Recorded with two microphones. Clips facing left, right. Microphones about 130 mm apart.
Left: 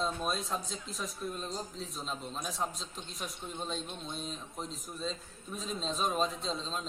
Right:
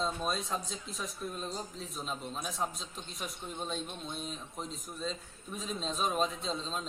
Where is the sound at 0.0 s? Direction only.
Centre (ahead or behind).